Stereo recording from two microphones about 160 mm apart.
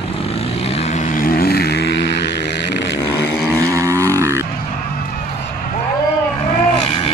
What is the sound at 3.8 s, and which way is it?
Vehicle, 20° right (ahead or behind).